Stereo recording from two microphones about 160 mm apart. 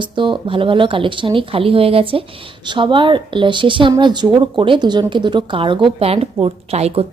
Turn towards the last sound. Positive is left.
turn(degrees=-40)  # may be behind; listen again after turning